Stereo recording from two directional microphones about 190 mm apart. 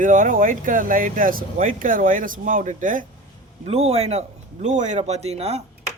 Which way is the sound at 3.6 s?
35° right (ahead or behind).